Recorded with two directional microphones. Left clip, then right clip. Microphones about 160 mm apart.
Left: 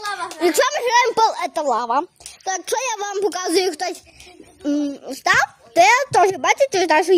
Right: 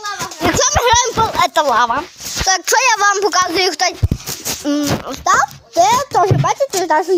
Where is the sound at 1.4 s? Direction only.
5° left (ahead or behind).